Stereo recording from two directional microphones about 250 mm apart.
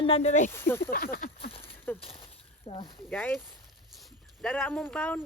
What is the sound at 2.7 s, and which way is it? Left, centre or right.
Speech, centre.